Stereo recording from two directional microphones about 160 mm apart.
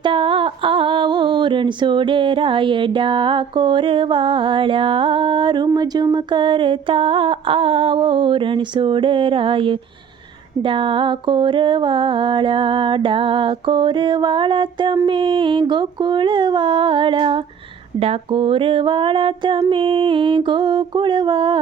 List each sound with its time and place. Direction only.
0.0 s female singing: 30° right (ahead or behind)